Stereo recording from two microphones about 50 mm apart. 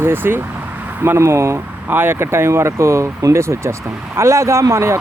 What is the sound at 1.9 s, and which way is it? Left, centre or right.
Speech, right.